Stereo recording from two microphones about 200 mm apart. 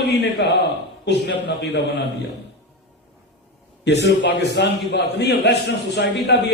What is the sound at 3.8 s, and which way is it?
A man's voice, 60° left (ahead or behind).